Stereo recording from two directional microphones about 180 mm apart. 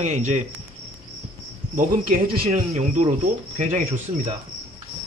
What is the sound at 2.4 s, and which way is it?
Speech, 35° right (ahead or behind).